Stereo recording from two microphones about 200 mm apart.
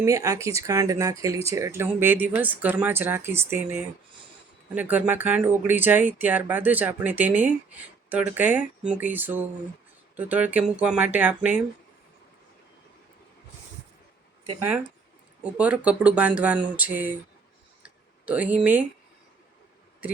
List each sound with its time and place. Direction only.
0.0 s speech: 15° right (ahead or behind)
15.4 s speech: 5° right (ahead or behind)
18.3 s speech: 5° right (ahead or behind)